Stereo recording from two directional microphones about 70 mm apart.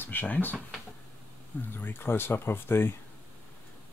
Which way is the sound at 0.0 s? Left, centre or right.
Left.